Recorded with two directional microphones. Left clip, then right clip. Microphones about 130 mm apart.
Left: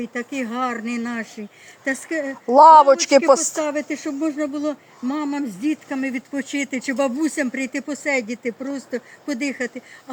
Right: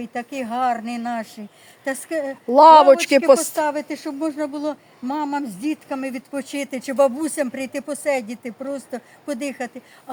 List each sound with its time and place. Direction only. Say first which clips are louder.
0.0 s speech: left 1 dB; 40° right (ahead or behind)
2.5 s speech: even; 10° right (ahead or behind)
3.6 s speech: right 1 dB; 35° right (ahead or behind)